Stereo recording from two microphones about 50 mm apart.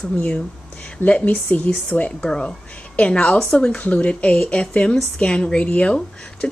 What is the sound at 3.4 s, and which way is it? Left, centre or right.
Speech, centre.